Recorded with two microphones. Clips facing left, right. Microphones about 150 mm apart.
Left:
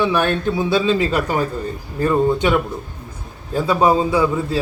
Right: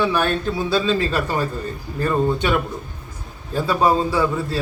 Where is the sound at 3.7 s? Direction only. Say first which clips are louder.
Left 3 dB; 15° left (ahead or behind).